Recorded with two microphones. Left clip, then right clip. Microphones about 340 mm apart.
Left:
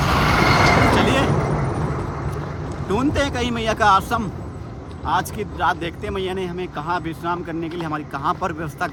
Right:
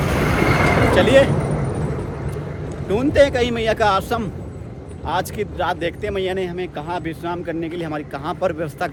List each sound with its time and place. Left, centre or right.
0.0 s vehicle: centre
5.0 s speech: centre